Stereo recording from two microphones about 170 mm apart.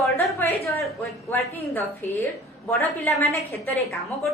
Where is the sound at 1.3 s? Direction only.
15° left (ahead or behind).